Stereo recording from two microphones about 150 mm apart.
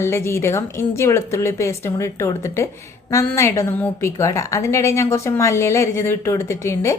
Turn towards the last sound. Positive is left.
turn(degrees=20)  # may be behind; listen again after turning